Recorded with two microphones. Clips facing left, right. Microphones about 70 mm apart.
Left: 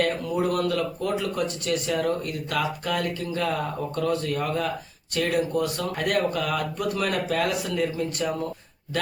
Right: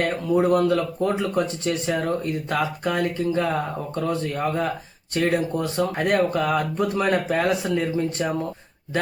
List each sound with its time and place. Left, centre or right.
0.0 s speech: right